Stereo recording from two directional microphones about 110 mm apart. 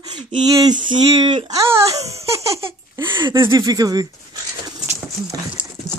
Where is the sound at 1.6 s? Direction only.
25° right (ahead or behind).